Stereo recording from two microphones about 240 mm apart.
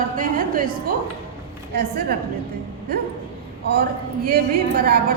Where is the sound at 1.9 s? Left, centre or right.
Right.